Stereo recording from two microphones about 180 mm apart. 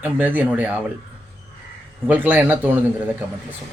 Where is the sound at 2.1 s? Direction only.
10° right (ahead or behind).